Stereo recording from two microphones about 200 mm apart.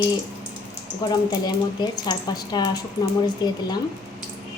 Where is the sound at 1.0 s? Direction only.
20° left (ahead or behind).